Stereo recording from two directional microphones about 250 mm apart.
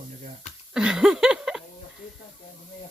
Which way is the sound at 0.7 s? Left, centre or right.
Centre.